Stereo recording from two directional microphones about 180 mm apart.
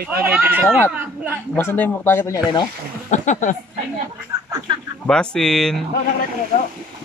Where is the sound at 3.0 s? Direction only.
40° left (ahead or behind).